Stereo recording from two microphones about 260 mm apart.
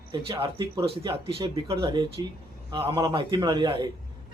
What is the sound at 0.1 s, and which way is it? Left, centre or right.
Speech, centre.